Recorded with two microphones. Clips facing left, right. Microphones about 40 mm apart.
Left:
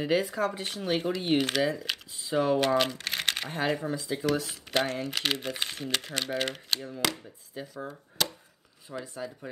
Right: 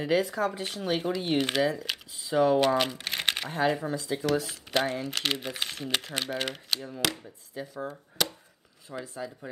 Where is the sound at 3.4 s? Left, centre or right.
Centre.